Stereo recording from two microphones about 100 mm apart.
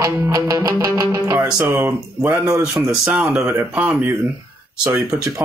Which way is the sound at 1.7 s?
20° right (ahead or behind).